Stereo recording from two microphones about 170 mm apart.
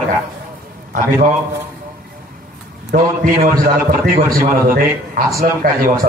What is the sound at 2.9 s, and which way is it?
A man's voice, 55° right (ahead or behind).